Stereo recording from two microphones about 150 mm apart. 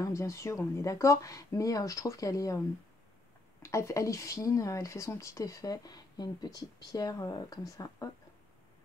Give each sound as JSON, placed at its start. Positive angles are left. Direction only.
{"t": 0.0, "sound": "speech", "side_deg": 20}
{"t": 3.6, "sound": "speech", "side_deg": 20}